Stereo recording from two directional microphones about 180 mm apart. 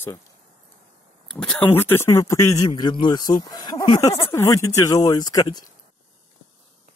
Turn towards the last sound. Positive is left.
turn(degrees=20)  # may be behind; listen again after turning